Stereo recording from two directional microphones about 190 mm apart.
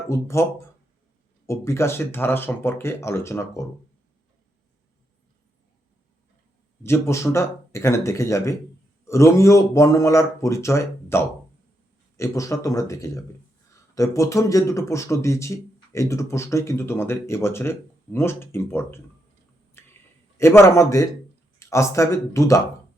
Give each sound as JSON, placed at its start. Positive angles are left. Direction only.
{"t": 0.1, "sound": "a man's voice", "side_deg": 15}
{"t": 1.5, "sound": "a man's voice", "side_deg": 15}
{"t": 6.8, "sound": "a man's voice", "side_deg": 15}
{"t": 19.8, "sound": "a sound", "side_deg": 10}
{"t": 20.4, "sound": "a man's voice", "side_deg": 15}